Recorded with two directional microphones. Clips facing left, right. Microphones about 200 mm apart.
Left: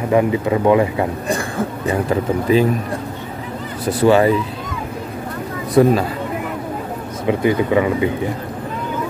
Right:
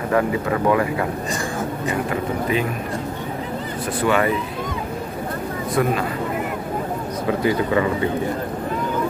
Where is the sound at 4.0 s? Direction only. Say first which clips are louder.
Left 7 dB; 30° left (ahead or behind).